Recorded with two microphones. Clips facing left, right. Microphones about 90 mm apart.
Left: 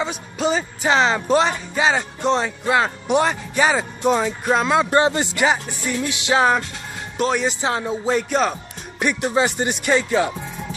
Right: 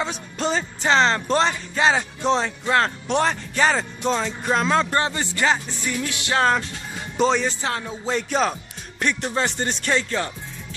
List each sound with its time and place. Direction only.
0.0 s speech: 5° left (ahead or behind)
4.9 s a man's voice: 20° left (ahead or behind)
7.2 s speech: 5° left (ahead or behind)
7.4 s a man's voice: 20° left (ahead or behind)
8.1 s speech: 5° left (ahead or behind)